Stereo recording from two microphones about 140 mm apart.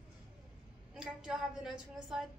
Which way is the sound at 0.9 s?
5° right (ahead or behind).